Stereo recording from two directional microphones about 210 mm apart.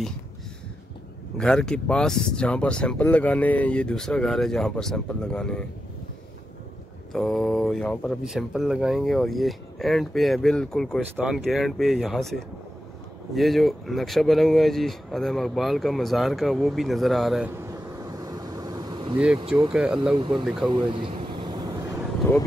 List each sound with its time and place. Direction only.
1.4 s speech: 5° left (ahead or behind)
7.1 s speech: centre (ahead or behind)
17.6 s vehicle: 15° right (ahead or behind)
19.1 s speech: 5° right (ahead or behind)
20.7 s vehicle: 25° right (ahead or behind)
22.2 s speech: 10° left (ahead or behind)